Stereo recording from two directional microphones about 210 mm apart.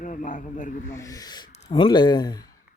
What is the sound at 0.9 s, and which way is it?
Speech, 15° left (ahead or behind).